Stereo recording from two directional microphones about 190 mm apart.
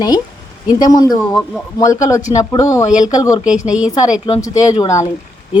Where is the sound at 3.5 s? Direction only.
5° right (ahead or behind).